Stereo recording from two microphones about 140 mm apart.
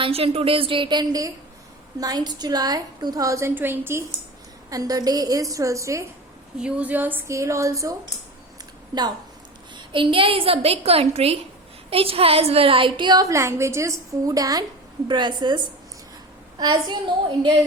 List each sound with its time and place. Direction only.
0.0 s a woman's voice: 45° right (ahead or behind); by 6.1 s 20° right (ahead or behind)
6.6 s a woman's voice: 10° right (ahead or behind); by 17.5 s 35° right (ahead or behind)